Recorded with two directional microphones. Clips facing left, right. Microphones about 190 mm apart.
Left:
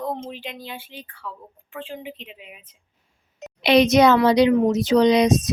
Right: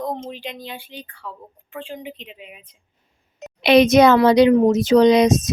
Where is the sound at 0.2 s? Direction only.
5° left (ahead or behind).